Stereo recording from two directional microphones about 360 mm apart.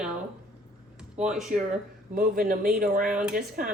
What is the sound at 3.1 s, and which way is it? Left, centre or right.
Speech, centre.